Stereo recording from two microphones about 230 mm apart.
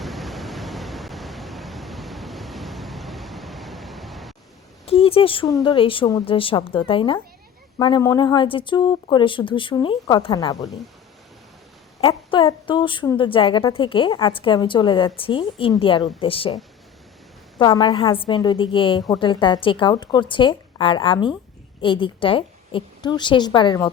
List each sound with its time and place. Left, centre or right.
0.0 s pink noise: centre
4.9 s a woman's voice: left
11.9 s a woman's voice: left
17.6 s a woman's voice: centre